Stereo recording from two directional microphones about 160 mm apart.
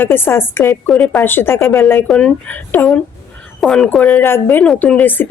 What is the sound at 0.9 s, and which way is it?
Speech, 5° left (ahead or behind).